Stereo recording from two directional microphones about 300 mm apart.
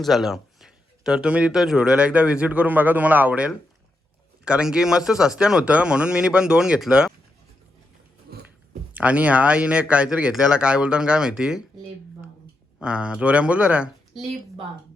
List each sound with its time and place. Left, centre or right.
0.0 s speech: centre
8.3 s biting: right
8.9 s speech: centre
12.8 s speech: centre